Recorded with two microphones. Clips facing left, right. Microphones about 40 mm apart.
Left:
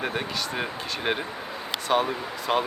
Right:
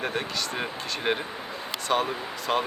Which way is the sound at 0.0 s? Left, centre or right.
Centre.